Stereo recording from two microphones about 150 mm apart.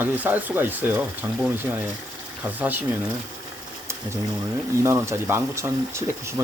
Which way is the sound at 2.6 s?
10° right (ahead or behind).